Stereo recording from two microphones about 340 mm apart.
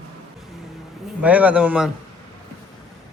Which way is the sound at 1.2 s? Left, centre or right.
Centre.